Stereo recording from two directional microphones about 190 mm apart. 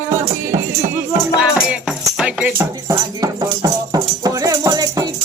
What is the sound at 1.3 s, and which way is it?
Music, 5° right (ahead or behind).